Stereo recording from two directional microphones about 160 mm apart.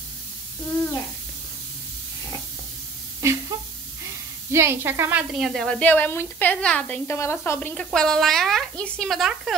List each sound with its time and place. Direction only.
3.2 s a sound: 20° right (ahead or behind)
4.5 s speech: 15° right (ahead or behind)
5.3 s a woman's voice: centre (ahead or behind); by 7.7 s 15° left (ahead or behind)
7.7 s speech: 5° left (ahead or behind)